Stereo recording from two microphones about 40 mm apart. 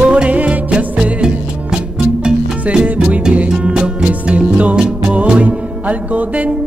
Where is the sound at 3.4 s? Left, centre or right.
Right.